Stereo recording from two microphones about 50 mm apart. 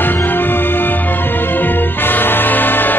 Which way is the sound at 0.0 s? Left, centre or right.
Left.